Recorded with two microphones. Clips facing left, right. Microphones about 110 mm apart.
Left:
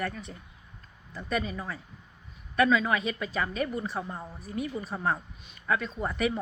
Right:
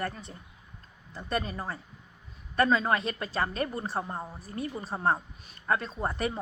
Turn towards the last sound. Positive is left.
turn(degrees=-35)  # may be behind; listen again after turning